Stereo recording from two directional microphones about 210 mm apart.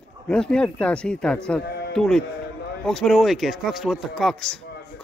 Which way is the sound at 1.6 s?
50° left (ahead or behind).